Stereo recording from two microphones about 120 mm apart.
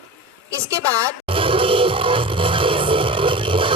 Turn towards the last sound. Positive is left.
turn(degrees=-45)  # may be behind; listen again after turning